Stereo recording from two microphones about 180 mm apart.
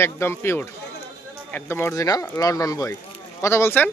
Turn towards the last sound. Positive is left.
turn(degrees=10)  # may be behind; listen again after turning